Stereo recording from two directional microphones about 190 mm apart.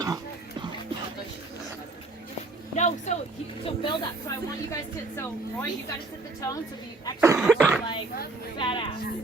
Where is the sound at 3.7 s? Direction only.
25° left (ahead or behind).